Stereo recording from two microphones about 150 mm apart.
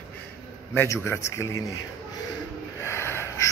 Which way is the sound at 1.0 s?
20° left (ahead or behind).